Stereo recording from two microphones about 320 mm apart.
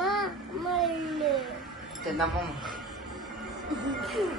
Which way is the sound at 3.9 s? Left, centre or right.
Centre.